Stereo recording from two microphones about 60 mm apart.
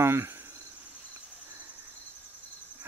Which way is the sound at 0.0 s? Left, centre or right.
Right.